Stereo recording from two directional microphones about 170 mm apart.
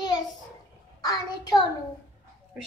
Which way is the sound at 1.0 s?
25° left (ahead or behind).